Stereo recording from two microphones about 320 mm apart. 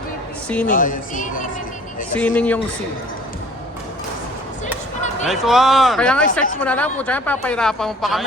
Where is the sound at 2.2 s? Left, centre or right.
Centre.